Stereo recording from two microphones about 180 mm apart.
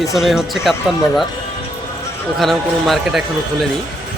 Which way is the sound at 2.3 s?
Centre (ahead or behind).